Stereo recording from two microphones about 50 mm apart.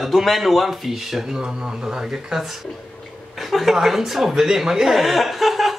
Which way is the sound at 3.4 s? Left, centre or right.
Centre.